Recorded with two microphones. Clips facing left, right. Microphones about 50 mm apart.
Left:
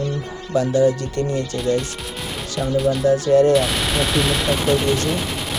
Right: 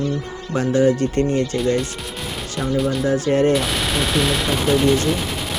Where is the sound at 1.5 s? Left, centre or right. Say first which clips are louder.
Right 1 dB; centre.